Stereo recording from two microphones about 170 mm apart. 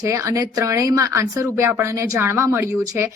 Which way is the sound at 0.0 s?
20° right (ahead or behind).